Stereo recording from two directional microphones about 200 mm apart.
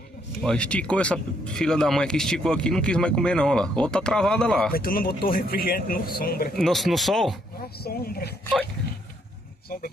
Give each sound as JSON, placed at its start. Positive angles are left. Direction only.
{"t": 0.4, "sound": "speech", "side_deg": 5}
{"t": 4.7, "sound": "speech", "side_deg": 45}
{"t": 6.5, "sound": "speech", "side_deg": 0}
{"t": 7.8, "sound": "speech", "side_deg": 50}